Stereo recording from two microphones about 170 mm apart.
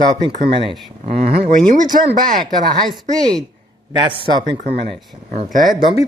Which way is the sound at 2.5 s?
Centre (ahead or behind).